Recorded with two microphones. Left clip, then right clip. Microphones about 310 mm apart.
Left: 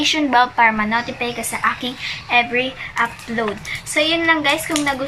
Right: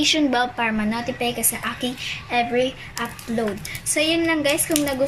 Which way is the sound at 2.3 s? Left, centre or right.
Centre.